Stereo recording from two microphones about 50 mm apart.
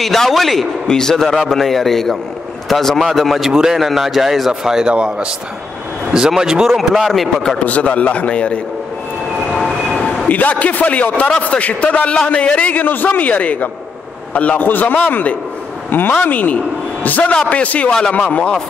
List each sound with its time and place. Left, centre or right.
0.0 s a man's voice: centre
0.8 s a man's voice: centre
7.1 s a man's voice: centre
7.5 s a man's voice: left
9.5 s train: centre
10.2 s a man's voice: left
12.8 s a man's voice: left
14.6 s a man's voice: left
17.3 s a man's voice: left